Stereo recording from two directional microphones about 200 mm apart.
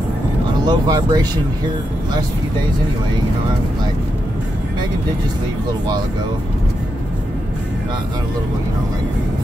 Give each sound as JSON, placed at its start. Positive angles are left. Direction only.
{"t": 0.7, "sound": "speech", "side_deg": -20}